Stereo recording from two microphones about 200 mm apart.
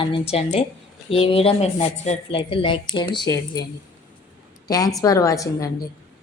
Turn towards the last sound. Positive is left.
turn(degrees=15)  # may be behind; listen again after turning